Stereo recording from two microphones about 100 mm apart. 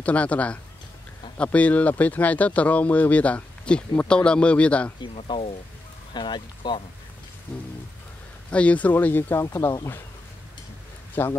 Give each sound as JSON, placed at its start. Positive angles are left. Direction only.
{"t": 0.0, "sound": "speech", "side_deg": 15}
{"t": 5.0, "sound": "speech", "side_deg": 70}
{"t": 6.1, "sound": "speech", "side_deg": 50}
{"t": 8.5, "sound": "speech", "side_deg": 10}
{"t": 9.5, "sound": "speech", "side_deg": 35}
{"t": 11.2, "sound": "speech", "side_deg": 25}